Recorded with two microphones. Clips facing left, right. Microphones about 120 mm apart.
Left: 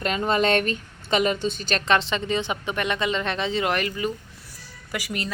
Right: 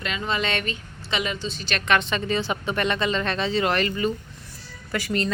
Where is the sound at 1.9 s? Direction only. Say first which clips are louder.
Even; 25° left (ahead or behind).